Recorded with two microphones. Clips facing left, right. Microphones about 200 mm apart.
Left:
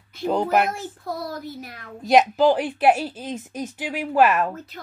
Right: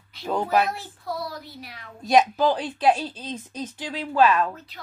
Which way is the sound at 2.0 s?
15° left (ahead or behind).